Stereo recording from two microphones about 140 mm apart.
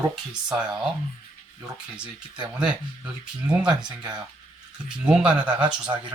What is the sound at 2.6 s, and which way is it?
Speech, 5° right (ahead or behind).